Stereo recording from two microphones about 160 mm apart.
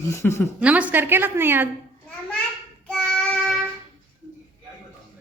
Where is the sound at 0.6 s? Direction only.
10° right (ahead or behind).